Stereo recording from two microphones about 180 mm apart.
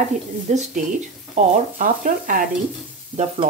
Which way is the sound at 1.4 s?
45° right (ahead or behind).